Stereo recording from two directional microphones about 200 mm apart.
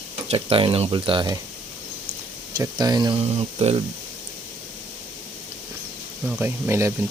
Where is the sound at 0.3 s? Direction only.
30° right (ahead or behind).